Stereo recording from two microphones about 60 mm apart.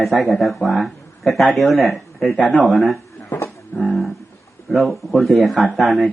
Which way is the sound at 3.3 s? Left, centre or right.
Left.